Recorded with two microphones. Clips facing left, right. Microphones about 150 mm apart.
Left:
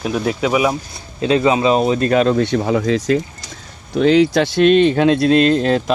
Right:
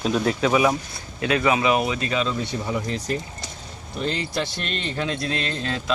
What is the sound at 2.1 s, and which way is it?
Speech, 60° left (ahead or behind).